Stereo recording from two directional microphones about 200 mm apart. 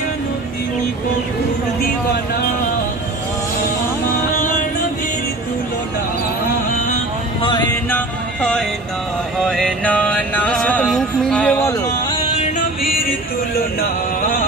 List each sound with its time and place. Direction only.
7.9 s music: 5° left (ahead or behind)
9.4 s mantra: 5° left (ahead or behind)
12.4 s music: 40° left (ahead or behind)